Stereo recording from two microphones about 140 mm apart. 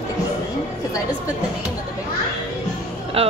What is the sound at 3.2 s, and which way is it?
Speech, 45° right (ahead or behind).